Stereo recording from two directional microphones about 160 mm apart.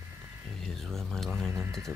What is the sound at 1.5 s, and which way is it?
Music, 15° right (ahead or behind).